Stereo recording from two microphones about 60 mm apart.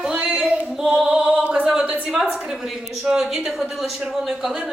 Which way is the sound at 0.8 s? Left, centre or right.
Centre.